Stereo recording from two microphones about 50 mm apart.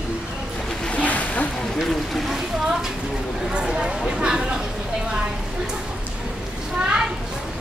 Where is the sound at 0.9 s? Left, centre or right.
Left.